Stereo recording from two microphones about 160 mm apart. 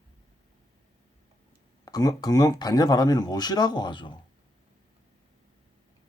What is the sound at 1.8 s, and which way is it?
Speech, 25° left (ahead or behind).